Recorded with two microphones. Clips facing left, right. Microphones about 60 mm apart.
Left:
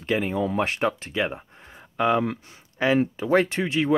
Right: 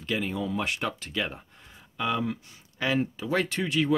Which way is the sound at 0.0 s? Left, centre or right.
Left.